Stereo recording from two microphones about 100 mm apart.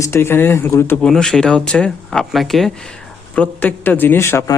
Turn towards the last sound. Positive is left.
turn(degrees=25)  # may be behind; listen again after turning